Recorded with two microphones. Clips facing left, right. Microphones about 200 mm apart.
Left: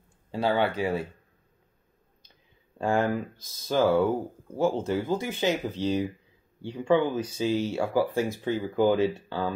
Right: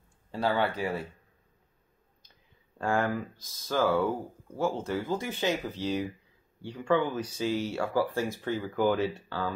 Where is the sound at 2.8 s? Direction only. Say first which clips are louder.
Left 3 dB; 20° left (ahead or behind).